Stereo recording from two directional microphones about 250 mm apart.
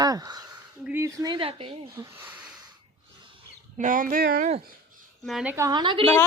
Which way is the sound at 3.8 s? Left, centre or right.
Right.